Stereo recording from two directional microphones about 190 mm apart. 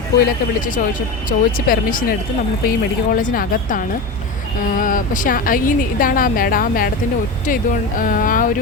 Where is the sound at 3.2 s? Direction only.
45° left (ahead or behind).